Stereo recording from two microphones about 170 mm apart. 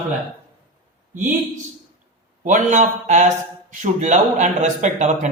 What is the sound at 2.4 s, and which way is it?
A man's voice, 45° right (ahead or behind).